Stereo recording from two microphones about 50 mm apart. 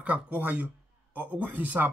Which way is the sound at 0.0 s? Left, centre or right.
Right.